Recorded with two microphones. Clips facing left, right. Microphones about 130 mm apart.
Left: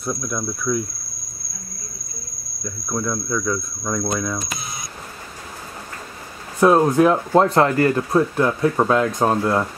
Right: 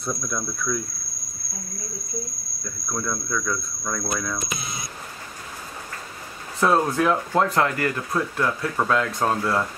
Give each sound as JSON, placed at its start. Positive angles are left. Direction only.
{"t": 0.0, "sound": "speech", "side_deg": 5}
{"t": 2.6, "sound": "speech", "side_deg": 10}
{"t": 6.6, "sound": "speech", "side_deg": 15}